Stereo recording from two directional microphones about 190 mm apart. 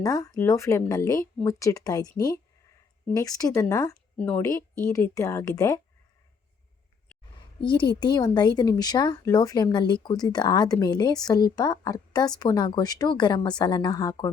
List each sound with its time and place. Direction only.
0.0 s speech: 20° left (ahead or behind)
7.6 s speech: 25° left (ahead or behind)